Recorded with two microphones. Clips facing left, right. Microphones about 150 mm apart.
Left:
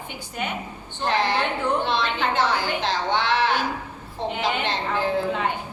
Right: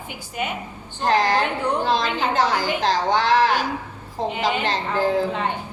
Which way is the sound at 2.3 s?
40° right (ahead or behind).